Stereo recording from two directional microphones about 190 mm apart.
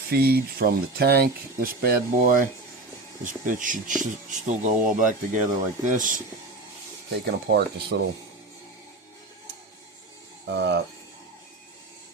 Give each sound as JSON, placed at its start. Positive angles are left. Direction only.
{"t": 0.1, "sound": "speech", "side_deg": -55}
{"t": 7.1, "sound": "speech", "side_deg": -55}
{"t": 10.4, "sound": "speech", "side_deg": -65}